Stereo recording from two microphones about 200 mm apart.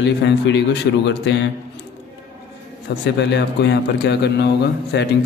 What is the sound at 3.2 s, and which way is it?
Mantra, 60° left (ahead or behind).